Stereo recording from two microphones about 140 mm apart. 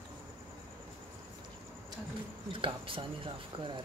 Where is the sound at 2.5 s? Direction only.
40° right (ahead or behind).